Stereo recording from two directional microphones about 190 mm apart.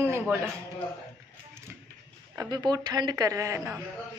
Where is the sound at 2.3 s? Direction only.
20° right (ahead or behind).